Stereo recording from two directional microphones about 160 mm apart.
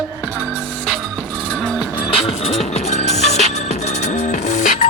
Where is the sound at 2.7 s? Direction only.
45° left (ahead or behind).